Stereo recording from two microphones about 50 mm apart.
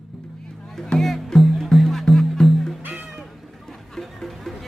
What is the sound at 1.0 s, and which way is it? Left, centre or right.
Music, centre.